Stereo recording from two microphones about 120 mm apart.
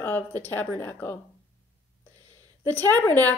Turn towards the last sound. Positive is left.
turn(degrees=15)  # may be behind; listen again after turning